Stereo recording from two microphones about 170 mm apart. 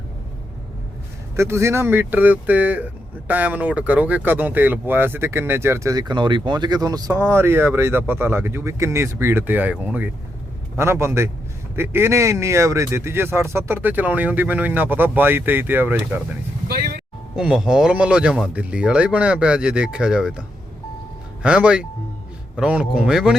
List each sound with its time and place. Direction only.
1.4 s speech: 15° right (ahead or behind)
16.6 s speech: 65° right (ahead or behind)
17.3 s speech: 5° right (ahead or behind)
21.4 s speech: 5° right (ahead or behind)